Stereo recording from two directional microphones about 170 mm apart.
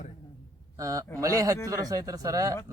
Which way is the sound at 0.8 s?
20° right (ahead or behind).